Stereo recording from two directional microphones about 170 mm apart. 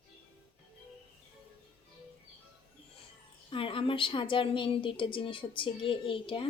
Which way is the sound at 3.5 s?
30° left (ahead or behind).